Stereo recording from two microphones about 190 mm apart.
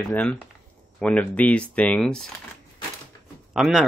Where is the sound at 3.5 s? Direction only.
Centre (ahead or behind).